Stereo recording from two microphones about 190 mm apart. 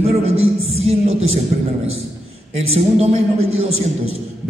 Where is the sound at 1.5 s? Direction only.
45° right (ahead or behind).